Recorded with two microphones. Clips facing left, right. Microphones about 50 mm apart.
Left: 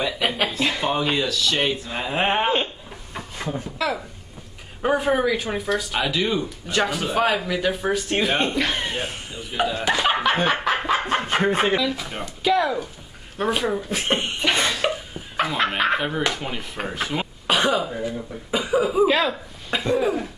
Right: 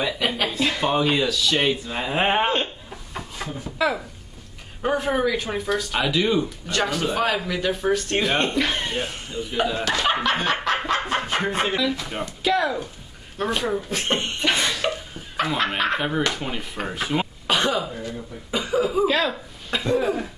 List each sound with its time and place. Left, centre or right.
0.2 s a sound: centre
0.6 s speech: centre
3.7 s speech: centre
4.8 s speech: centre
9.8 s snicker: centre
11.3 s speech: centre
14.6 s a sound: left
14.9 s a sound: centre
16.2 s speech: centre
16.4 s speech: centre